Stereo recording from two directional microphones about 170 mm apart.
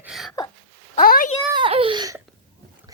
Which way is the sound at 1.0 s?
60° left (ahead or behind).